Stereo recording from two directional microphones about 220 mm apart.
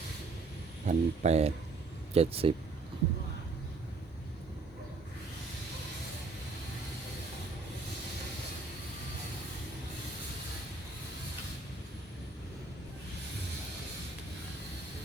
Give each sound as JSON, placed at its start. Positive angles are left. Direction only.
{"t": 0.9, "sound": "speech", "side_deg": -30}